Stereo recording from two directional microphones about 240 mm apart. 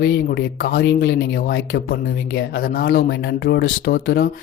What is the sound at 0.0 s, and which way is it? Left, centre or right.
Speech, left.